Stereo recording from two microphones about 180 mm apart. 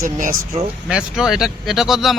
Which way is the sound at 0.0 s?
50° right (ahead or behind).